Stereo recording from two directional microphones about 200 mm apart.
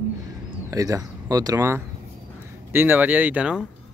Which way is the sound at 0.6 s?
15° right (ahead or behind).